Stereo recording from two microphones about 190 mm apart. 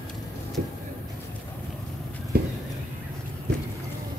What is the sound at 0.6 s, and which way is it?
Vehicle, 60° right (ahead or behind).